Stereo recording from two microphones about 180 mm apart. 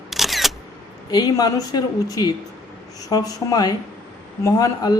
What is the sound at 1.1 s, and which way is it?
A man's voice, 20° left (ahead or behind).